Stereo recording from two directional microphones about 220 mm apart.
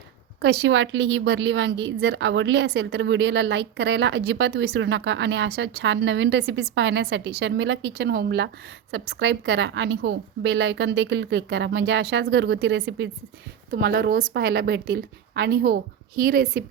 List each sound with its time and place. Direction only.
0.4 s speech: 55° right (ahead or behind)